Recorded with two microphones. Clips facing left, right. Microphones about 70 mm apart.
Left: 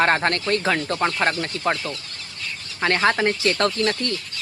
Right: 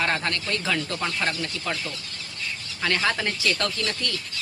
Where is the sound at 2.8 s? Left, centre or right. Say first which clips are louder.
Left 6 dB; left.